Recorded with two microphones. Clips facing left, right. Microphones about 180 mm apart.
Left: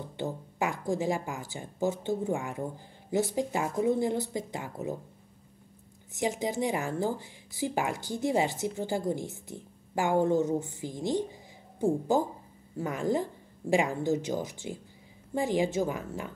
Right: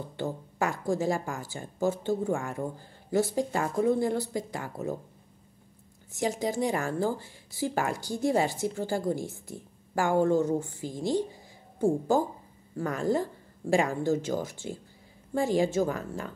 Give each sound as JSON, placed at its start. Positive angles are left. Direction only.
{"t": 0.2, "sound": "a woman's voice", "side_deg": 20}
{"t": 6.1, "sound": "a woman's voice", "side_deg": 20}